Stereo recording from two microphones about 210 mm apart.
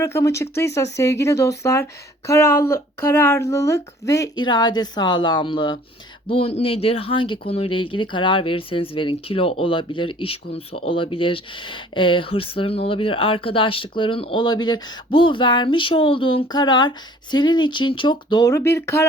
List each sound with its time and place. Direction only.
0.0 s speech: 15° left (ahead or behind)